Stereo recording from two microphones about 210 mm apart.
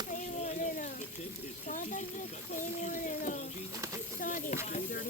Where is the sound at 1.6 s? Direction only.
40° left (ahead or behind).